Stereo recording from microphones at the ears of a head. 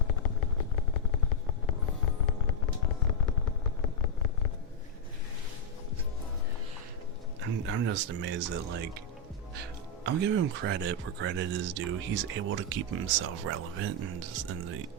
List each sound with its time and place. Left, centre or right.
0.0 s vehicle: left
7.4 s speech: right